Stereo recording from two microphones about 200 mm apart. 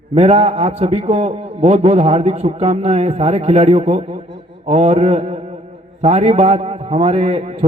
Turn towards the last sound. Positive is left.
turn(degrees=-30)  # may be behind; listen again after turning